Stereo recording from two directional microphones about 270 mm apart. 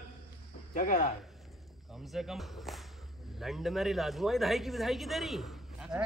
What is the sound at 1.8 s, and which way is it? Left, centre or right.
Speech, centre.